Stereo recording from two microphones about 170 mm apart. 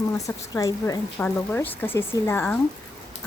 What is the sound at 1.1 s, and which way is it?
Speech, 10° left (ahead or behind).